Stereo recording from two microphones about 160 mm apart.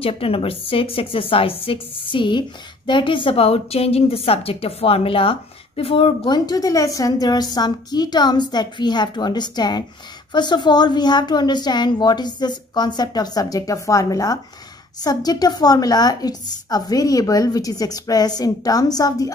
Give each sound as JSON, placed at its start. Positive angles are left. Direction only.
{"t": 0.0, "sound": "a woman's voice", "side_deg": 35}